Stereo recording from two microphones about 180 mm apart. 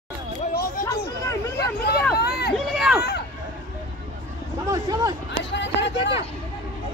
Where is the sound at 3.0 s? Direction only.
60° left (ahead or behind).